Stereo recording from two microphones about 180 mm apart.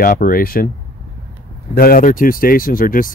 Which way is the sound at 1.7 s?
55° left (ahead or behind).